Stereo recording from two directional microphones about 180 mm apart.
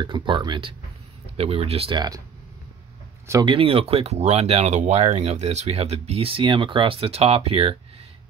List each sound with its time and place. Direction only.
0.0 s speech: 25° right (ahead or behind)
3.3 s speech: 25° right (ahead or behind)